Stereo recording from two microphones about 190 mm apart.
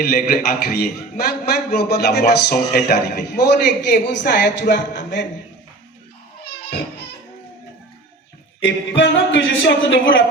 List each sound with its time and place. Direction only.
0.0 s a man's voice: 50° left (ahead or behind)
6.4 s music: 55° left (ahead or behind)
8.6 s speech: 75° left (ahead or behind)